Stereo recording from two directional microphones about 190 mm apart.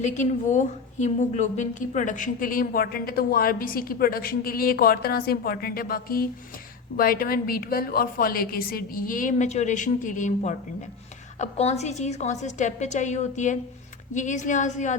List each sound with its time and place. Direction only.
0.0 s a woman's voice: 40° left (ahead or behind)